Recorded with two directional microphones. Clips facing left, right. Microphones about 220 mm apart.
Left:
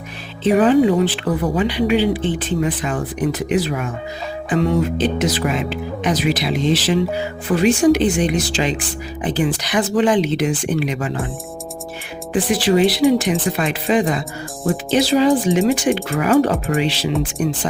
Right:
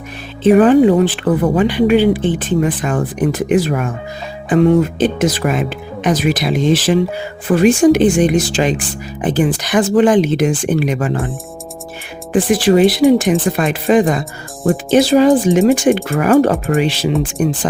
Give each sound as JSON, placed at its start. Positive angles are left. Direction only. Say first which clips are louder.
{"t": 0.4, "sound": "speech", "louder": "right 5 dB", "side_deg": -50}
{"t": 12.3, "sound": "speech", "louder": "right 5 dB", "side_deg": -50}
{"t": 17.1, "sound": "speech", "louder": "right 4 dB", "side_deg": 0}